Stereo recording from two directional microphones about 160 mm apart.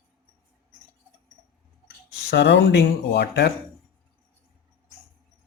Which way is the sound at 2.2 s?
90° left.